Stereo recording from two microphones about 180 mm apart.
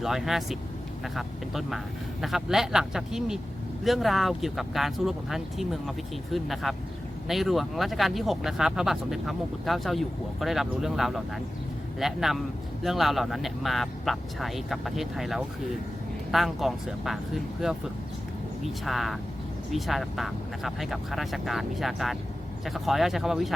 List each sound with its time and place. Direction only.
0.0 s speech: centre (ahead or behind)